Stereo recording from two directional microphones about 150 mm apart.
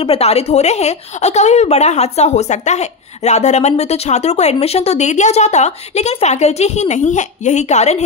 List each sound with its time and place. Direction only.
0.0 s a woman's voice: 40° left (ahead or behind)